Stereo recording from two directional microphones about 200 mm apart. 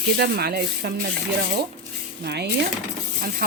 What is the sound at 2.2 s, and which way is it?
Speech, 55° right (ahead or behind).